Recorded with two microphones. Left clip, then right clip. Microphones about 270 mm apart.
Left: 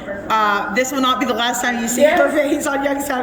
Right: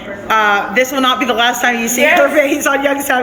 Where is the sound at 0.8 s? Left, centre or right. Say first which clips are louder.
Right 4 dB; centre.